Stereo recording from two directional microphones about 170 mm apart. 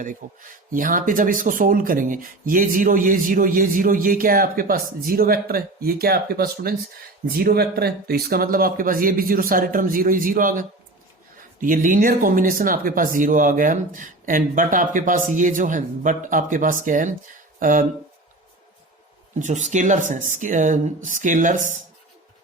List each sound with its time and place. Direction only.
0.2 s speech: 50° right (ahead or behind)
19.4 s speech: 45° right (ahead or behind)